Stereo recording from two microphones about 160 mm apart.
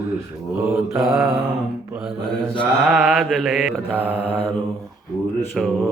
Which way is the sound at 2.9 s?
5° right (ahead or behind).